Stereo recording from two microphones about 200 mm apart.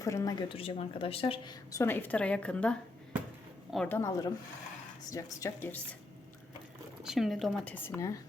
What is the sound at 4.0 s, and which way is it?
A woman's voice, 15° left (ahead or behind).